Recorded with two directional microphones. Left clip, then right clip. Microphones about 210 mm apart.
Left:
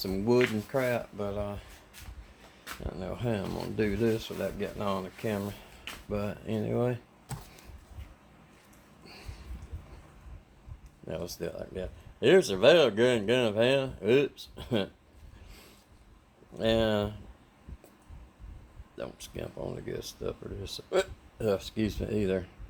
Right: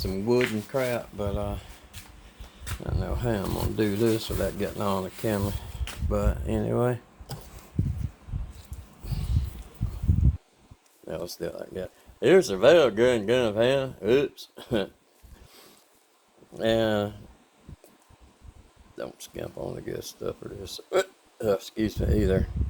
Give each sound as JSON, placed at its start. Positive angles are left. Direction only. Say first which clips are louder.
{"t": 0.0, "sound": "speech", "louder": "right 1 dB", "side_deg": 5}
{"t": 1.2, "sound": "speech", "louder": "right 3 dB", "side_deg": -15}
{"t": 2.8, "sound": "speech", "louder": "right 4 dB", "side_deg": -15}
{"t": 6.1, "sound": "speech", "louder": "right 6 dB", "side_deg": -15}
{"t": 11.1, "sound": "speech", "louder": "right 3 dB", "side_deg": -15}
{"t": 16.6, "sound": "speech", "louder": "right 3 dB", "side_deg": -15}
{"t": 18.9, "sound": "speech", "louder": "right 3 dB", "side_deg": -10}